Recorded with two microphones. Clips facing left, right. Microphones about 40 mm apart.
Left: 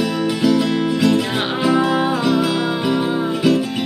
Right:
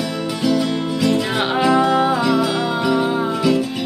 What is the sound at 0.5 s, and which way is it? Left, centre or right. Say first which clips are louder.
Music: left 2 dB; left.